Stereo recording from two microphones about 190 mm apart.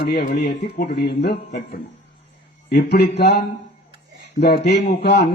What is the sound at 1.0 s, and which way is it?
Speech, 60° left (ahead or behind).